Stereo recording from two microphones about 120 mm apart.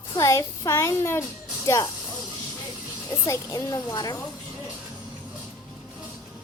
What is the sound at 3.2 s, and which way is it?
Speech, 25° left (ahead or behind).